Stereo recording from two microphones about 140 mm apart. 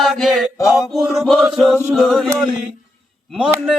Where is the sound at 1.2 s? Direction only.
Centre (ahead or behind).